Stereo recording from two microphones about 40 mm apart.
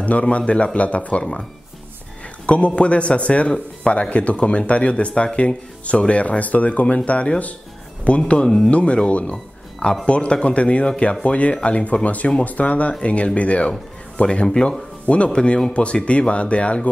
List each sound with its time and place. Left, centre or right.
0.0 s speech: left
2.4 s speech: left